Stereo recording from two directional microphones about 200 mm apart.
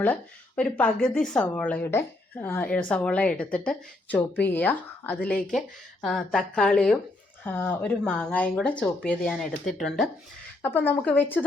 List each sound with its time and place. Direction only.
0.0 s speech: 5° left (ahead or behind)